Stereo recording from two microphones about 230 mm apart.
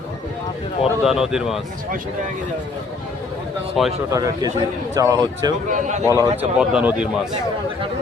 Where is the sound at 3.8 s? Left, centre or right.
Centre.